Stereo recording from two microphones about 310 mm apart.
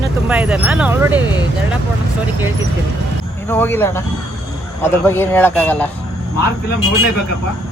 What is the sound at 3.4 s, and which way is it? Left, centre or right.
A man's voice, centre.